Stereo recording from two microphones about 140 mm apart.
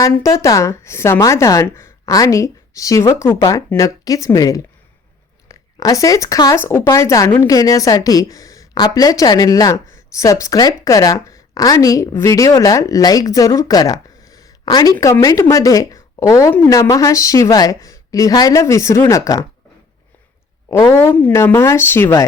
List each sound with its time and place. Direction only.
0.0 s a woman's voice: 20° left (ahead or behind)
5.7 s a woman's voice: 25° left (ahead or behind)
20.7 s speech: 20° left (ahead or behind)